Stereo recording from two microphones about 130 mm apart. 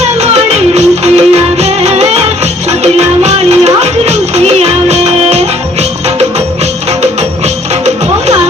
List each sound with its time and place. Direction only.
0.7 s music: 55° right (ahead or behind)
7.0 s music: 55° right (ahead or behind)